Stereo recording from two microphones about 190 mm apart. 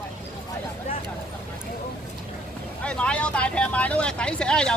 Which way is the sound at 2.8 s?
5° left (ahead or behind).